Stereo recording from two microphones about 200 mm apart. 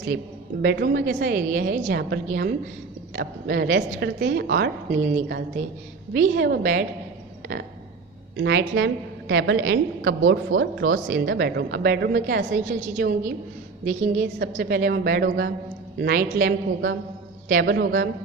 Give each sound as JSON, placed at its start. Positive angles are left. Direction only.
{"t": 0.6, "sound": "a woman's voice", "side_deg": -55}
{"t": 4.9, "sound": "speech", "side_deg": -35}
{"t": 6.3, "sound": "a woman's voice", "side_deg": -55}
{"t": 8.4, "sound": "a woman's voice", "side_deg": -60}
{"t": 10.5, "sound": "a woman's voice", "side_deg": -75}
{"t": 12.6, "sound": "a woman's voice", "side_deg": -40}
{"t": 14.3, "sound": "a woman's voice", "side_deg": -60}